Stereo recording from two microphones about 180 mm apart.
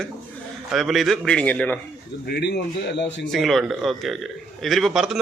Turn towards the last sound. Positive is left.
turn(degrees=0)  # may be behind; listen again after turning